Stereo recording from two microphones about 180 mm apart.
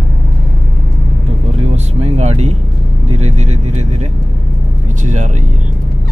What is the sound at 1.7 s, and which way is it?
Vehicle, 35° right (ahead or behind).